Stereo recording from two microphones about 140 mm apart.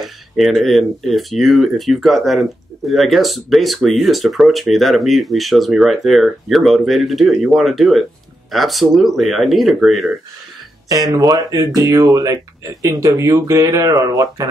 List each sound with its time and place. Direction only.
0.0 s speech: centre (ahead or behind)
10.9 s speech: 25° right (ahead or behind)